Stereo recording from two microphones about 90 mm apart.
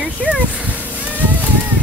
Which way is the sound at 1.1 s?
20° right (ahead or behind).